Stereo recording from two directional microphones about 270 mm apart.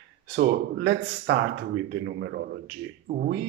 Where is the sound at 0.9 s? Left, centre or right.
Right.